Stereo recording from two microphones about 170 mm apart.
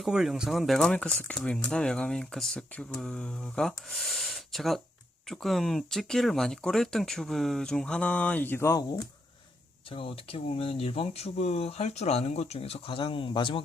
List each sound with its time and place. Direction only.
0.0 s speech: centre (ahead or behind); by 9.0 s 15° left (ahead or behind)
9.9 s speech: 30° left (ahead or behind)